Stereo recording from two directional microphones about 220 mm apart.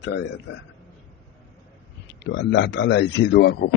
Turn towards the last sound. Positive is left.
turn(degrees=50)  # may be behind; listen again after turning